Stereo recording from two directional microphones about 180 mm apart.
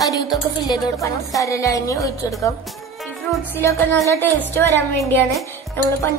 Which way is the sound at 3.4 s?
10° left (ahead or behind).